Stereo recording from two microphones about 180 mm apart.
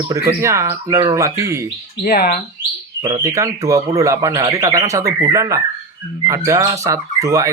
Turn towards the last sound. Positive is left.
turn(degrees=-15)  # may be behind; listen again after turning